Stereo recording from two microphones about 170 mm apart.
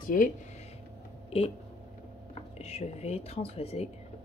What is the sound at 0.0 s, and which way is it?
Speech, 50° left (ahead or behind).